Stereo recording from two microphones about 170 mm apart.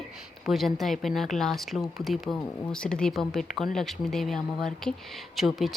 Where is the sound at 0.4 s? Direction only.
Centre (ahead or behind).